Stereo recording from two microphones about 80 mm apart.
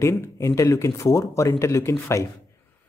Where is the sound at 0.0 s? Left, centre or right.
Left.